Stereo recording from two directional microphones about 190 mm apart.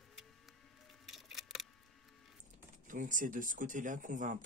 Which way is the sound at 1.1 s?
Centre (ahead or behind).